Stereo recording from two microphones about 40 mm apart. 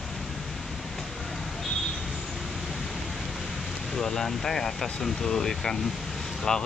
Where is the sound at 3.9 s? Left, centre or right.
Centre.